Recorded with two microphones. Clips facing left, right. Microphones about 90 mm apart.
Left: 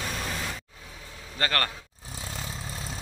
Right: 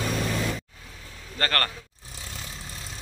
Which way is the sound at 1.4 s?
15° left (ahead or behind).